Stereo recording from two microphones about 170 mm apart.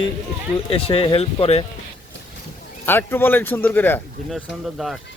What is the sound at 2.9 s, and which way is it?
Speech, 10° left (ahead or behind).